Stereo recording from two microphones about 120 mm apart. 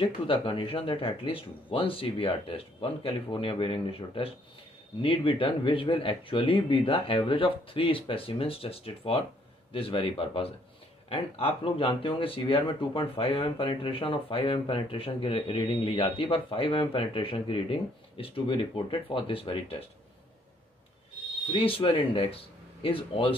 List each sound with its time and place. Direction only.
0.0 s speech: 50° left (ahead or behind)
21.5 s speech: 45° left (ahead or behind)